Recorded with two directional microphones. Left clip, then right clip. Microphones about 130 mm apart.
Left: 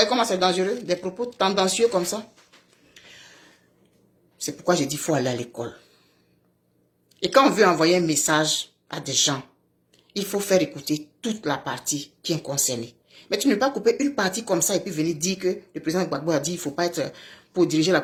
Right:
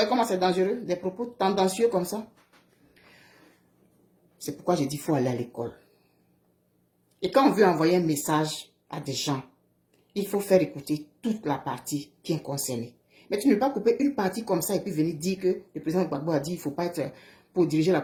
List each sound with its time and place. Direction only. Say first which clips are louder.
0.0 s speech: left 3 dB; 25° right (ahead or behind)
4.4 s speech: left 4 dB; 20° right (ahead or behind)
7.2 s speech: left 4 dB; 20° right (ahead or behind)